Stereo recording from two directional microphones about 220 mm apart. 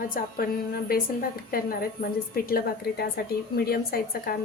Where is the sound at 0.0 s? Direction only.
40° left (ahead or behind).